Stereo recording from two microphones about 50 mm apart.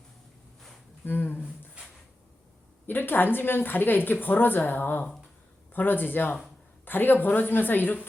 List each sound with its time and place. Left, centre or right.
1.0 s speech: left
2.8 s a woman's voice: left